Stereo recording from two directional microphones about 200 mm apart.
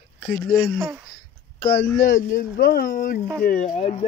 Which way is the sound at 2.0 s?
45° left (ahead or behind).